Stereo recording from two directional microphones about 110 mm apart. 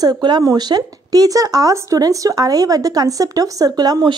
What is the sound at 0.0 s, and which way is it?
Speech, 40° right (ahead or behind).